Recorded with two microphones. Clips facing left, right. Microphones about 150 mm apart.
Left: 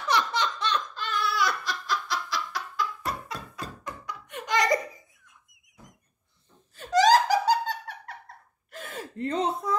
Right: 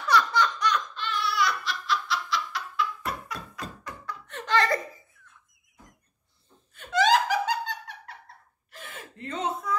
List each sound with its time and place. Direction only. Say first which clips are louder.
0.0 s laughter: right 3 dB; 20° left (ahead or behind); by 3.2 s 40° left (ahead or behind)
3.3 s a sound: even; 20° left (ahead or behind)
6.7 s laughter: left 3 dB; 35° left (ahead or behind)
8.7 s gasp: left 7 dB; 40° left (ahead or behind)